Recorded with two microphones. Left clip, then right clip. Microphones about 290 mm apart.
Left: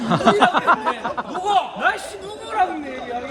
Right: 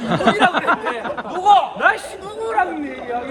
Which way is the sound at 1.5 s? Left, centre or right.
Centre.